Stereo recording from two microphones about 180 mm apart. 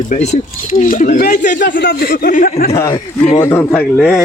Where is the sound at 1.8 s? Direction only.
65° left (ahead or behind); by 2.7 s 50° left (ahead or behind).